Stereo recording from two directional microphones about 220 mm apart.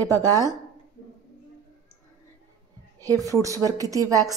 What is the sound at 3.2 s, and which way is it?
Speech, 15° right (ahead or behind).